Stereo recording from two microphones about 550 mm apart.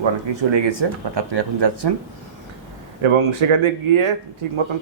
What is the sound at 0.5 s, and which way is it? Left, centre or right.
A man's voice, right.